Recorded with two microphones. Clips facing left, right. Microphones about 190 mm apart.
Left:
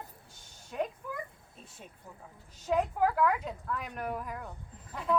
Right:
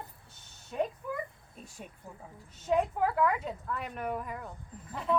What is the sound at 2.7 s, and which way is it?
A woman's voice, centre (ahead or behind).